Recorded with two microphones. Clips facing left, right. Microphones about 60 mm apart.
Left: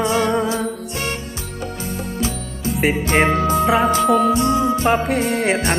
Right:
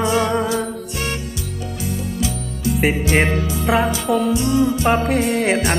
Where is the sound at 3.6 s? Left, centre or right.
Centre.